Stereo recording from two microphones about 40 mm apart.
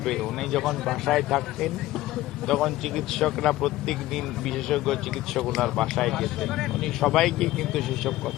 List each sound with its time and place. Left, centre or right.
0.0 s speech: centre